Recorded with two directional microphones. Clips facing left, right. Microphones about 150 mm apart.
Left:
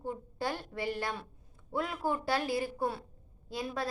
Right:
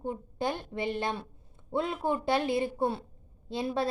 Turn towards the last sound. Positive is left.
turn(degrees=-25)  # may be behind; listen again after turning